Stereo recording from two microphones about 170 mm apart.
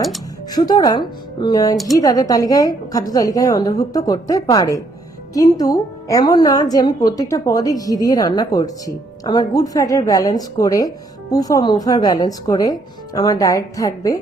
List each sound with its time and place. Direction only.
0.5 s a woman's voice: 25° left (ahead or behind)